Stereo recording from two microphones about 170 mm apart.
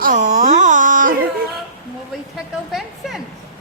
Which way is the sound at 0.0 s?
50° right (ahead or behind).